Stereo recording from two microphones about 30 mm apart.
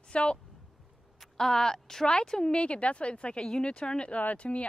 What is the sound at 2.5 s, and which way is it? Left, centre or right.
Speech, left.